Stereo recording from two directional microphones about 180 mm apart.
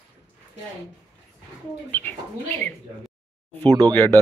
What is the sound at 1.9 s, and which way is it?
Speech, 10° left (ahead or behind).